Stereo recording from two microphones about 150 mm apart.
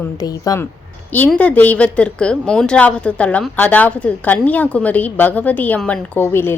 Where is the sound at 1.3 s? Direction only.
10° left (ahead or behind).